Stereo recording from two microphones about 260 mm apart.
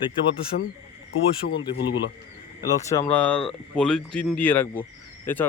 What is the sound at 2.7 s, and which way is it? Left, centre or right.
A man's voice, centre.